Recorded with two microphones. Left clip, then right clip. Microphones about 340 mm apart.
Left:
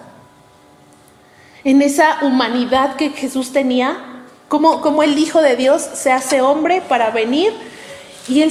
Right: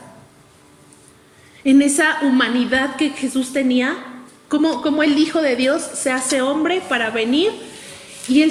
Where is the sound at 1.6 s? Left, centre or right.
Centre.